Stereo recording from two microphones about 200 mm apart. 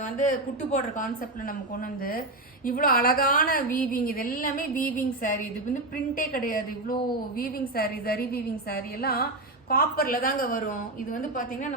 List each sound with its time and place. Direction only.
0.0 s speech: 40° left (ahead or behind)
2.6 s a woman's voice: 45° left (ahead or behind)